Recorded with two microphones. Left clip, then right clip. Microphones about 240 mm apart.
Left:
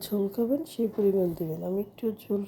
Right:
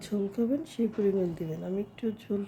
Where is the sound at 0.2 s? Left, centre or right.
Centre.